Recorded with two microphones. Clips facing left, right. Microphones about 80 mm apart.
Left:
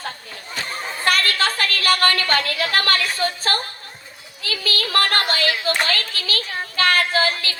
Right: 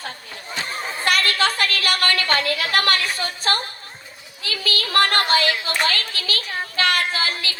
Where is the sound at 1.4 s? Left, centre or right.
Left.